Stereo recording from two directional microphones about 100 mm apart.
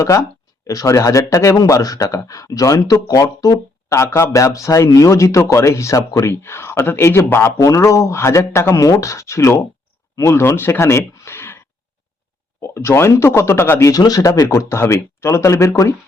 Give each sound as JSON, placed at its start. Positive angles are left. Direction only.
{"t": 0.0, "sound": "speech", "side_deg": 30}
{"t": 12.6, "sound": "speech", "side_deg": 30}
{"t": 13.9, "sound": "speech", "side_deg": 40}